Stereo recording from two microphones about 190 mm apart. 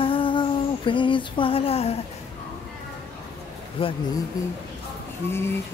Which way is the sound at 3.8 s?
30° left (ahead or behind).